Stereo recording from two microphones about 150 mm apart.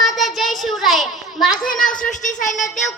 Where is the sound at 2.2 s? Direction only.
55° left (ahead or behind).